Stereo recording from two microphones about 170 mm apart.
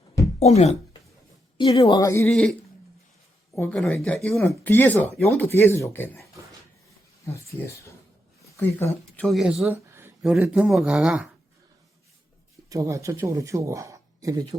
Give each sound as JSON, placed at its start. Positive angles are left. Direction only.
{"t": 0.3, "sound": "speech", "side_deg": 40}
{"t": 1.5, "sound": "speech", "side_deg": 25}
{"t": 2.3, "sound": "speech", "side_deg": 5}
{"t": 3.5, "sound": "speech", "side_deg": 15}
{"t": 8.5, "sound": "speech", "side_deg": 15}
{"t": 9.2, "sound": "speech", "side_deg": 0}
{"t": 12.6, "sound": "speech", "side_deg": -20}